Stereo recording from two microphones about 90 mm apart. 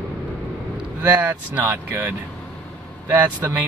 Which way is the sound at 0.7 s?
15° right (ahead or behind).